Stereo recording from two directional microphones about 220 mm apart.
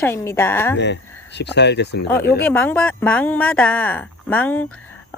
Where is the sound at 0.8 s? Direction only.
50° left (ahead or behind).